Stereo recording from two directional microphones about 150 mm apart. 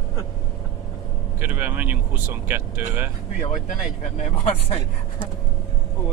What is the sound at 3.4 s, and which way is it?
Speech, 55° left (ahead or behind).